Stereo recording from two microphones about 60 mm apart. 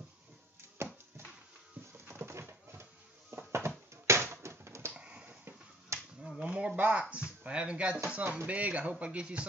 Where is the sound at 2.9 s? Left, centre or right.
Right.